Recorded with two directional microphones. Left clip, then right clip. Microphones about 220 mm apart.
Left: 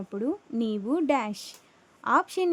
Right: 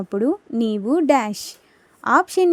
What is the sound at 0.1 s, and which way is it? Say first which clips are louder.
A woman's voice: right 9 dB; 30° right (ahead or behind).